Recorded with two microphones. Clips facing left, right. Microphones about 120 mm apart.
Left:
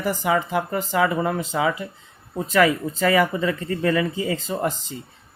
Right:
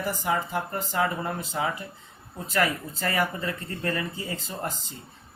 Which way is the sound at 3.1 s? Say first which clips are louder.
Left 5 dB; 90° left.